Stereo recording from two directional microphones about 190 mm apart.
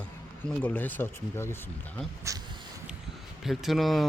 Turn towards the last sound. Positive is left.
turn(degrees=0)  # may be behind; listen again after turning